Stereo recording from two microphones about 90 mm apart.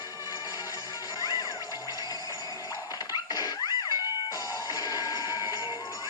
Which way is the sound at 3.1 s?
50° left (ahead or behind).